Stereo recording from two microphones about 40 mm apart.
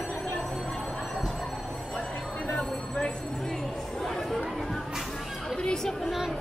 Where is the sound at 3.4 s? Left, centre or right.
Centre.